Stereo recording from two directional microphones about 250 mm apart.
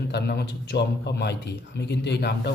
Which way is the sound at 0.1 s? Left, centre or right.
Left.